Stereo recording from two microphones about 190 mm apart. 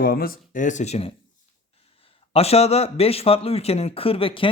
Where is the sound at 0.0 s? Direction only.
50° left (ahead or behind); by 1.1 s 35° left (ahead or behind).